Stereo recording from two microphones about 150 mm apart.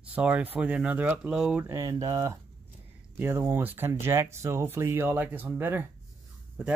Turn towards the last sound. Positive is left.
turn(degrees=-10)  # may be behind; listen again after turning